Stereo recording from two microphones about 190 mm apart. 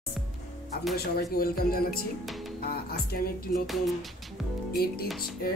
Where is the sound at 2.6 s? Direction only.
55° left (ahead or behind).